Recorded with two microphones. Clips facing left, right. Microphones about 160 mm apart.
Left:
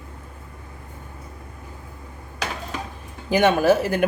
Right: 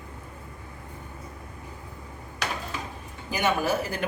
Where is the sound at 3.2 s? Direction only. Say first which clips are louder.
Left 9 dB; 85° left.